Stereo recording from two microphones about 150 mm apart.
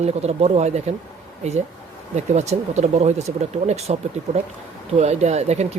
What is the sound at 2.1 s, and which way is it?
Speech, 50° right (ahead or behind).